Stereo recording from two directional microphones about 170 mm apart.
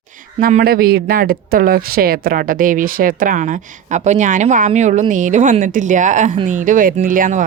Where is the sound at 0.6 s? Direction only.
60° right (ahead or behind).